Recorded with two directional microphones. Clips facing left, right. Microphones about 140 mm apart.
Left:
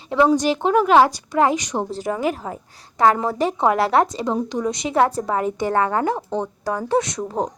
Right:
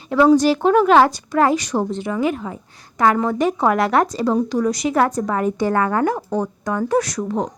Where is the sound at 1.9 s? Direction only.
35° left (ahead or behind).